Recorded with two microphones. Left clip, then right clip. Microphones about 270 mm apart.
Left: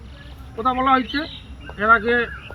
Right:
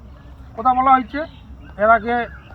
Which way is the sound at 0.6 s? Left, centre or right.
Centre.